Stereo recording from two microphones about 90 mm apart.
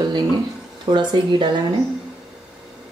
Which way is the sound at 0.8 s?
55° right (ahead or behind).